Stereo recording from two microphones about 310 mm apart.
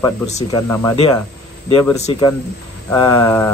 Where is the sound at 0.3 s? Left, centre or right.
Left.